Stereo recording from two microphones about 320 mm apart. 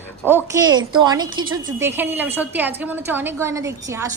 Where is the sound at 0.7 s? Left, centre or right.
Centre.